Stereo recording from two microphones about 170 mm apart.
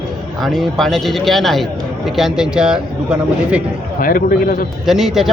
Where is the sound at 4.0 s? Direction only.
55° left (ahead or behind).